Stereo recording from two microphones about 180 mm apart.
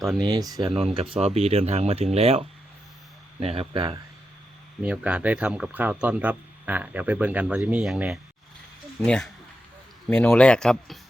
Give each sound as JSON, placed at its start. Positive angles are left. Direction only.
{"t": 0.2, "sound": "speech", "side_deg": -20}
{"t": 0.6, "sound": "speech", "side_deg": -35}
{"t": 3.4, "sound": "speech", "side_deg": -35}
{"t": 4.8, "sound": "speech", "side_deg": -5}